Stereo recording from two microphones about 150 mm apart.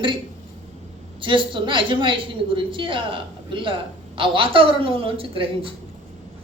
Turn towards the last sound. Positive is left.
turn(degrees=-40)  # may be behind; listen again after turning